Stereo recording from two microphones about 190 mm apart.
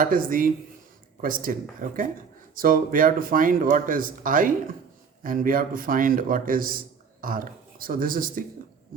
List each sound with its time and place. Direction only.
0.0 s speech: 50° right (ahead or behind)